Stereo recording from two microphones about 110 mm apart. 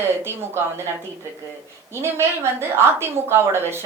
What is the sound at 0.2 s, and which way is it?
Speech, 25° right (ahead or behind).